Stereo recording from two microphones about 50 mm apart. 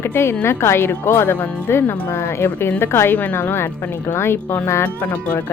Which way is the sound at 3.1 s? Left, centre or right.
Left.